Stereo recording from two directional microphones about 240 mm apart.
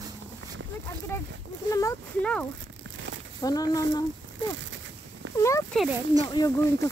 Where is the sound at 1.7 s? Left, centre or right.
Centre.